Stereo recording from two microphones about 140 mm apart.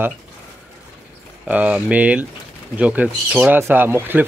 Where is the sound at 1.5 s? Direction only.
10° right (ahead or behind).